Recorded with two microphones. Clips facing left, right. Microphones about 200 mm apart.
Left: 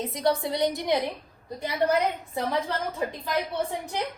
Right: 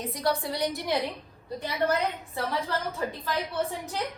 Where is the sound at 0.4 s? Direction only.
20° left (ahead or behind).